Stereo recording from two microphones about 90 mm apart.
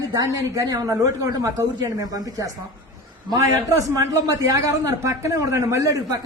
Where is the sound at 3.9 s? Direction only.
45° right (ahead or behind).